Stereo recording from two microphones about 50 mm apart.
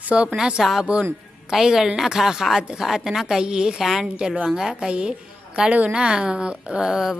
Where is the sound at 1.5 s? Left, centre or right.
Centre.